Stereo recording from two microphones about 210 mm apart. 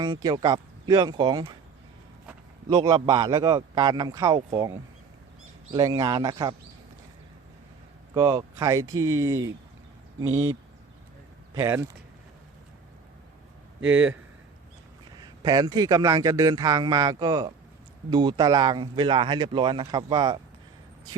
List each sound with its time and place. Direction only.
0.0 s speech: 20° right (ahead or behind)
2.6 s speech: 20° right (ahead or behind)
8.1 s a man's voice: 15° right (ahead or behind)
10.2 s speech: 70° right (ahead or behind)
11.5 s a man's voice: 15° right (ahead or behind)
13.9 s a man's voice: 10° right (ahead or behind)
15.2 s a man's voice: 20° right (ahead or behind)